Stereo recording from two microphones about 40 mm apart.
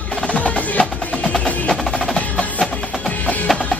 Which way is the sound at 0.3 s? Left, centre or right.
Left.